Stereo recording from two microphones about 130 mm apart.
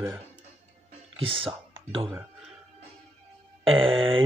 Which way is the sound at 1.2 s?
45° right (ahead or behind).